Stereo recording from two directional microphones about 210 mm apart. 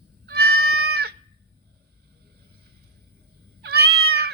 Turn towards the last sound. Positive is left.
turn(degrees=-50)  # may be behind; listen again after turning